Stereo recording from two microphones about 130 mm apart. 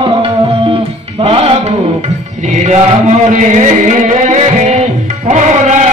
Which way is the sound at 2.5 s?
60° right (ahead or behind).